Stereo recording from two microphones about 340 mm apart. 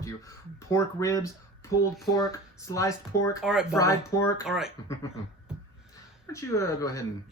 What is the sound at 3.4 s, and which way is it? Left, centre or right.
Speech, centre.